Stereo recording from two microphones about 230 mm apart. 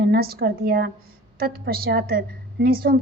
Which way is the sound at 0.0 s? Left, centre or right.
Right.